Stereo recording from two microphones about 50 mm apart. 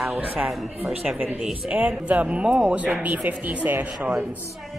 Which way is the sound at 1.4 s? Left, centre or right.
Centre.